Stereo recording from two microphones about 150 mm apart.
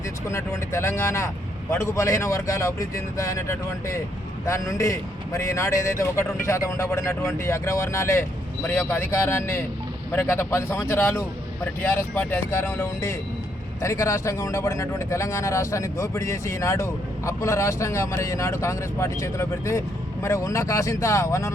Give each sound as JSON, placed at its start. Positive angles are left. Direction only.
{"t": 0.3, "sound": "a man's voice", "side_deg": 20}